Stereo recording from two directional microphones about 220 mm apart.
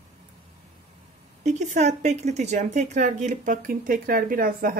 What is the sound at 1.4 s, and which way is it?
Speech, 30° right (ahead or behind).